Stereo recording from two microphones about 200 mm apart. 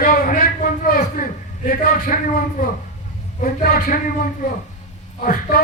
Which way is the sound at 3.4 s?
45° left (ahead or behind).